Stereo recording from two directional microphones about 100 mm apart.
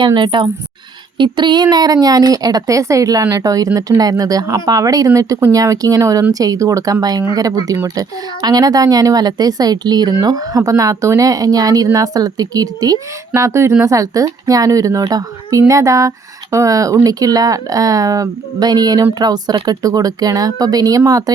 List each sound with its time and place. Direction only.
0.0 s speech: 50° right (ahead or behind); by 21.3 s 35° right (ahead or behind)